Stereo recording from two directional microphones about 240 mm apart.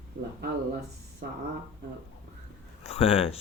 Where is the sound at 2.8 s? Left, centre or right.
Left.